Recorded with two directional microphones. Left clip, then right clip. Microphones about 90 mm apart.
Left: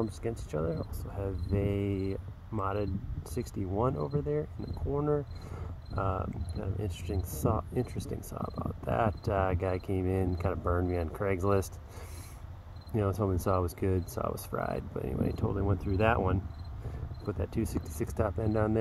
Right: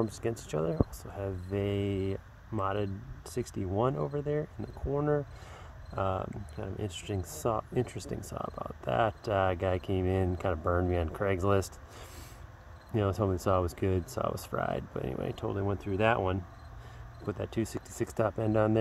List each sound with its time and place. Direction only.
0.2 s speech: 65° right (ahead or behind)
1.1 s speech: 30° right (ahead or behind)
5.9 s speech: 30° right (ahead or behind)
12.9 s speech: 30° right (ahead or behind)
17.3 s speech: 35° right (ahead or behind)